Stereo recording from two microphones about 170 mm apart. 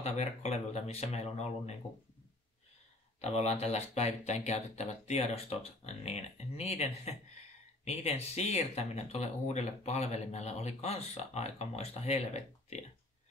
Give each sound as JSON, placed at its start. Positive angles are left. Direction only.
{"t": 0.0, "sound": "speech", "side_deg": 40}
{"t": 3.2, "sound": "speech", "side_deg": 40}